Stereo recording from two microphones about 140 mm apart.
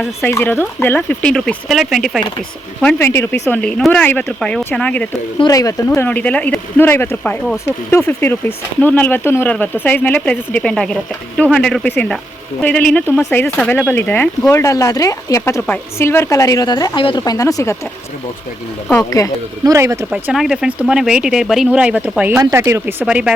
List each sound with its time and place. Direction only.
0.2 s speech: 15° left (ahead or behind); by 2.2 s centre (ahead or behind)
2.8 s speech: 15° left (ahead or behind)
5.4 s a woman's voice: 25° left (ahead or behind)
6.1 s a woman's voice: 10° left (ahead or behind)
19.2 s a woman's voice: 25° left (ahead or behind)
19.6 s speech: 20° right (ahead or behind)
20.1 s speech: 5° right (ahead or behind)
22.4 s speech: 20° right (ahead or behind)